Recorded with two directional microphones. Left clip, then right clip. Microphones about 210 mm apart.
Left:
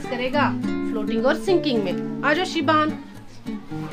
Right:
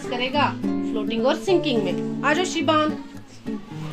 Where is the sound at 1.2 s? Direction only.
20° left (ahead or behind).